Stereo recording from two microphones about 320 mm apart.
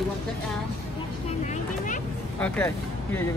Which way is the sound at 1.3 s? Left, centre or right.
Left.